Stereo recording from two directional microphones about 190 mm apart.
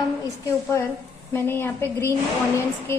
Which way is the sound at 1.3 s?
10° left (ahead or behind).